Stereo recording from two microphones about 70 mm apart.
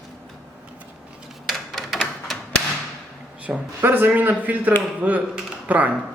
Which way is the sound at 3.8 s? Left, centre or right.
Right.